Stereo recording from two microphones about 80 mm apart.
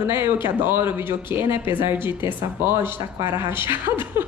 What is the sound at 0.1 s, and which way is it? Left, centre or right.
Speech, right.